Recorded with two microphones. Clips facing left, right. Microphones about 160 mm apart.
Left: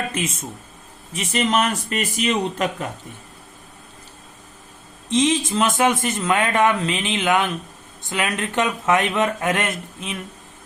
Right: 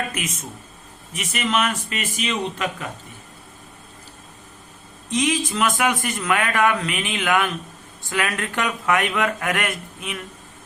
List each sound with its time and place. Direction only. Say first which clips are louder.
0.1 s speech: left 4 dB; 30° left (ahead or behind)
5.1 s speech: left 3 dB; 25° left (ahead or behind)